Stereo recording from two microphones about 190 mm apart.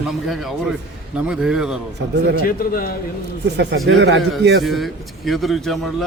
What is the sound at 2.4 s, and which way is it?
Speech, 50° left (ahead or behind).